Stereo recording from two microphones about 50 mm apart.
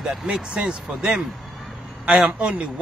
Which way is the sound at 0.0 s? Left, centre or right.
Centre.